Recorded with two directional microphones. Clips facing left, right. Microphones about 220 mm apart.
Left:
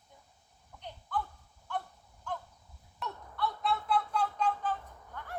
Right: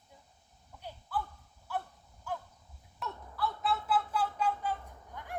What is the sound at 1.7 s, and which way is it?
Honk, 5° right (ahead or behind).